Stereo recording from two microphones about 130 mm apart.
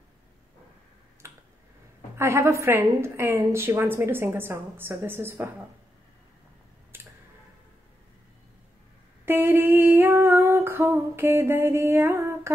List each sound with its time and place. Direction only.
1.2 s finger snapping: 20° right (ahead or behind)
2.1 s a woman's voice: 20° right (ahead or behind)
6.9 s tick-tock: 15° right (ahead or behind)
9.2 s female singing: 15° right (ahead or behind)